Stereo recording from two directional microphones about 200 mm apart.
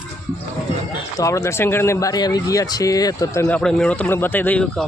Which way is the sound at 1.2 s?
15° left (ahead or behind).